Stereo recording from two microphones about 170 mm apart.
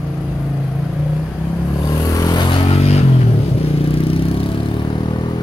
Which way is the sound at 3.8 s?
30° left (ahead or behind).